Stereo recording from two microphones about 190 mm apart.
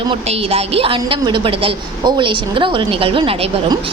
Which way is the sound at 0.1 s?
30° right (ahead or behind).